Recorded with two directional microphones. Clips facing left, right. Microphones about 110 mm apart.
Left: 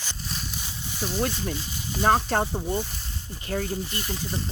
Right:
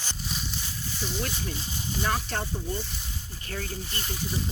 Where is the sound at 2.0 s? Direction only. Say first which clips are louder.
Left 9 dB; 40° left (ahead or behind).